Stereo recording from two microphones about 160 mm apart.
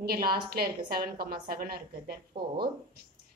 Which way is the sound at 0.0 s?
70° right (ahead or behind).